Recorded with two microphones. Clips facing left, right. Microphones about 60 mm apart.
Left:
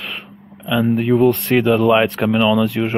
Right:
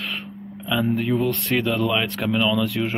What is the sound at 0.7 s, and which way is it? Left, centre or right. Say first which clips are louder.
Speech: left 6 dB; centre.